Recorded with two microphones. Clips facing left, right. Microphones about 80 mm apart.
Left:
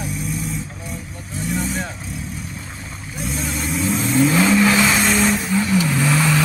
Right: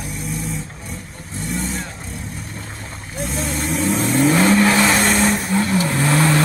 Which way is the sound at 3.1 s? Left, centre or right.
Right.